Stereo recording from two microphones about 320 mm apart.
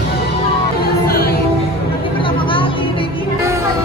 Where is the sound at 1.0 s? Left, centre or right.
Left.